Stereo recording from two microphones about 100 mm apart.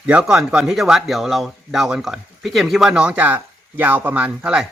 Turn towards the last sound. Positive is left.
turn(degrees=-10)  # may be behind; listen again after turning